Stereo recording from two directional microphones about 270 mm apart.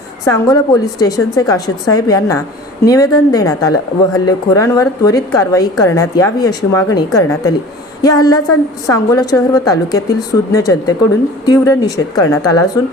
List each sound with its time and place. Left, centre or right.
0.3 s speech: centre